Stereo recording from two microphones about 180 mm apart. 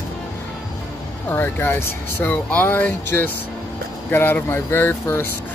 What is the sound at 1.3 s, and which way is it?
Speech, 10° left (ahead or behind).